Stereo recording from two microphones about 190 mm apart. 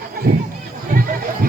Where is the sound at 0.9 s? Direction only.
50° right (ahead or behind).